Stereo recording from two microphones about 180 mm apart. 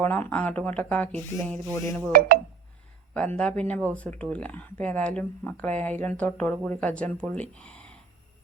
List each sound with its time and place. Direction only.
0.0 s speech: 10° left (ahead or behind)
3.2 s speech: 5° left (ahead or behind)